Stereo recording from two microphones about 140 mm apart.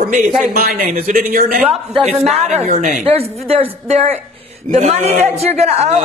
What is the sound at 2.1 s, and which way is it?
Speech, 50° right (ahead or behind).